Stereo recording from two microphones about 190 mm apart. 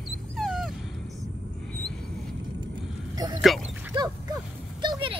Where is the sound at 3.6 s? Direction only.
20° right (ahead or behind).